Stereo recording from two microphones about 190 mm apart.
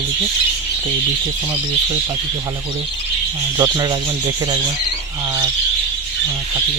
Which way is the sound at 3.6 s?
20° right (ahead or behind).